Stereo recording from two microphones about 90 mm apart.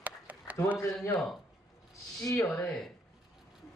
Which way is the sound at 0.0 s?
15° right (ahead or behind).